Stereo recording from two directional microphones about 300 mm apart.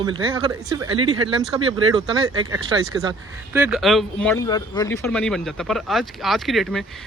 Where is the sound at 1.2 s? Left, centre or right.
Centre.